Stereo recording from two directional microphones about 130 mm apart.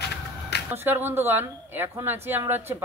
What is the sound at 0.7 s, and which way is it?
Speech, 15° right (ahead or behind).